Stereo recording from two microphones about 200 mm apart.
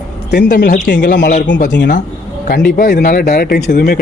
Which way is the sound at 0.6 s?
40° left (ahead or behind).